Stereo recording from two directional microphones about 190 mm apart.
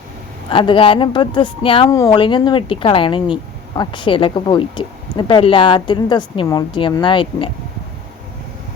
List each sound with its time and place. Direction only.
0.5 s speech: 25° left (ahead or behind)